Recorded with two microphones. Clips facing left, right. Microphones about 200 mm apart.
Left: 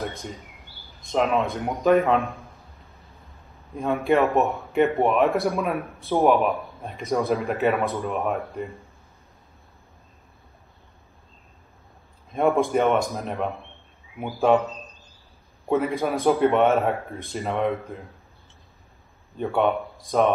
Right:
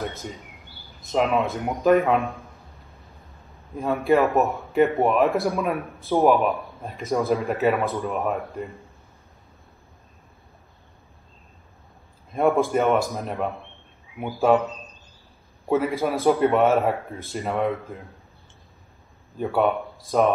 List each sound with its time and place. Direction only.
0.1 s speech: 5° right (ahead or behind)
3.7 s speech: centre (ahead or behind)
12.3 s speech: centre (ahead or behind)
19.3 s speech: 5° right (ahead or behind)